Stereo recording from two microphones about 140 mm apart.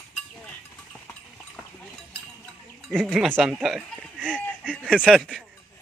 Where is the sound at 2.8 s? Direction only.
Centre (ahead or behind).